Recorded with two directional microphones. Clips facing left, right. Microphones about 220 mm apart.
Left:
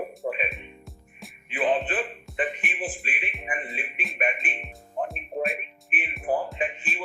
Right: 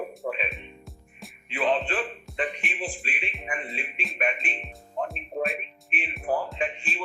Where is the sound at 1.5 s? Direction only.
20° left (ahead or behind).